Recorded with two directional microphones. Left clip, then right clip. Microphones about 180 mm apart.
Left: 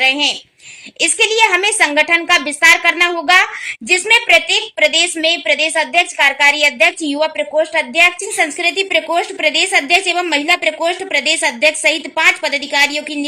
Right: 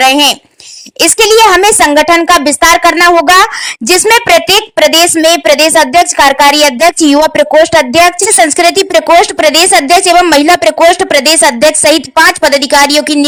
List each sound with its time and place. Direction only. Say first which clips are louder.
0.0 s a woman's voice: right 8 dB; 35° right (ahead or behind)